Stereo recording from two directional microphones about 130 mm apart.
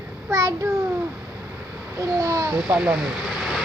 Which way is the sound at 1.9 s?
25° right (ahead or behind).